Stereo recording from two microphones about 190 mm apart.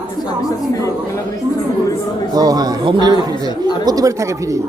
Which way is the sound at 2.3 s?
20° right (ahead or behind).